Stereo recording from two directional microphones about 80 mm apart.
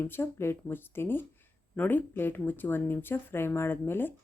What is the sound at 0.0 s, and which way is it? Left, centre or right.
Speech, left.